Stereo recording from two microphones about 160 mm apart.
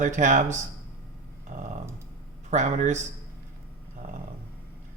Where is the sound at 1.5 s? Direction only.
55° right (ahead or behind).